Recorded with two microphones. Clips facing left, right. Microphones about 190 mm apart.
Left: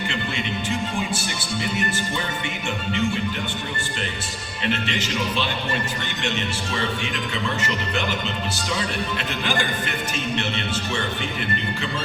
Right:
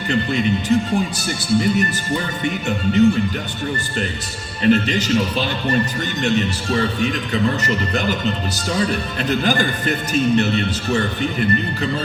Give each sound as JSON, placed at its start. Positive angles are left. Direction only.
{"t": 0.1, "sound": "speech", "side_deg": -40}
{"t": 2.4, "sound": "speech", "side_deg": -40}
{"t": 4.6, "sound": "speech", "side_deg": -40}
{"t": 9.3, "sound": "speech", "side_deg": -40}